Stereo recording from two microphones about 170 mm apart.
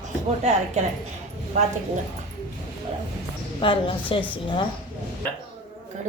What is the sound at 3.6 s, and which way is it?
Speech, 30° left (ahead or behind).